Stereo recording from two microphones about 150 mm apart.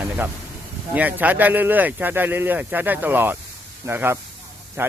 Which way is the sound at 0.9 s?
10° right (ahead or behind).